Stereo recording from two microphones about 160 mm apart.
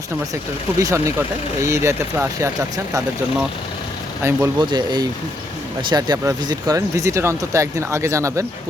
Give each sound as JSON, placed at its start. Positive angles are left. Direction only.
{"t": 0.8, "sound": "speech", "side_deg": -20}
{"t": 4.2, "sound": "speech", "side_deg": -15}
{"t": 4.6, "sound": "speech", "side_deg": -25}